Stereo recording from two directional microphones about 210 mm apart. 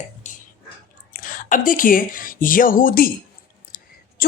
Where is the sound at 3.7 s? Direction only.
40° left (ahead or behind).